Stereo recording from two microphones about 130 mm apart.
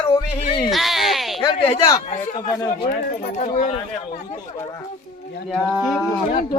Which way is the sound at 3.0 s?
85° left.